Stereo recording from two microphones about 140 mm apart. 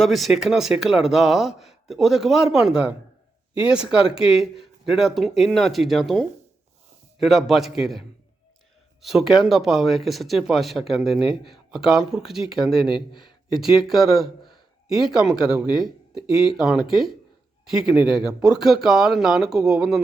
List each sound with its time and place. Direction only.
0.0 s speech: centre (ahead or behind)